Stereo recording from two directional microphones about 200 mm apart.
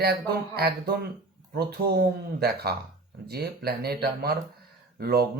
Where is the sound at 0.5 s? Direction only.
50° right (ahead or behind).